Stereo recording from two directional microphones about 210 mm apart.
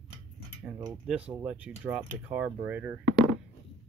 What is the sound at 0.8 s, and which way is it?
Speech, 10° right (ahead or behind).